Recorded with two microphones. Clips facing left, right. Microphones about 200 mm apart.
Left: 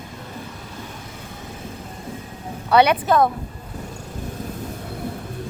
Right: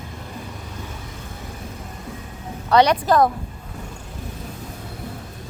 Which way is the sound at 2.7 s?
5° left (ahead or behind).